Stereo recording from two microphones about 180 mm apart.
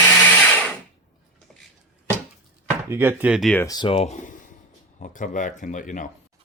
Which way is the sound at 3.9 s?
40° left (ahead or behind).